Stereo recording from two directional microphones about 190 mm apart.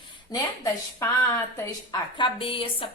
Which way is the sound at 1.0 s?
15° left (ahead or behind).